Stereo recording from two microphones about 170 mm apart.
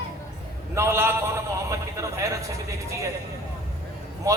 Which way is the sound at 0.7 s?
15° right (ahead or behind).